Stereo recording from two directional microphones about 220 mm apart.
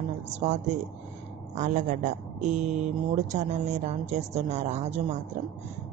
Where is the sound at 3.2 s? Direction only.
30° right (ahead or behind).